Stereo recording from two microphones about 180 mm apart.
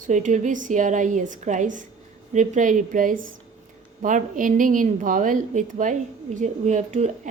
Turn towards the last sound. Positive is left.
turn(degrees=-40)  # may be behind; listen again after turning